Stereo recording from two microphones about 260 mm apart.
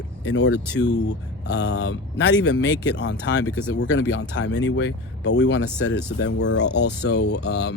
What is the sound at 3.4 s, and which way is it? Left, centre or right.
Speech, centre.